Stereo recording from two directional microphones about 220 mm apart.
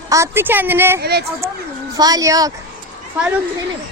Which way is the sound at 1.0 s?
45° right (ahead or behind).